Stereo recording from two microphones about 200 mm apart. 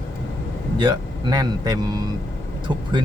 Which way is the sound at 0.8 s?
20° right (ahead or behind).